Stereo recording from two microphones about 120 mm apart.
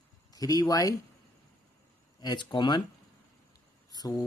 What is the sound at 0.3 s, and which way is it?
Speech, 30° left (ahead or behind).